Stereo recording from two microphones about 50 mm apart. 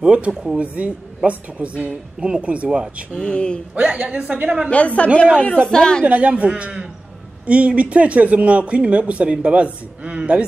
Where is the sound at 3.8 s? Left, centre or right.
Right.